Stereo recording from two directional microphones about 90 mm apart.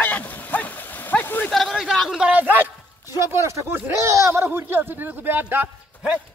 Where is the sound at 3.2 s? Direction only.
30° right (ahead or behind).